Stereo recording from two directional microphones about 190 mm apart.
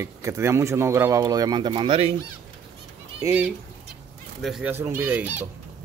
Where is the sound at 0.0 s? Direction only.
15° right (ahead or behind); by 2.1 s 30° right (ahead or behind).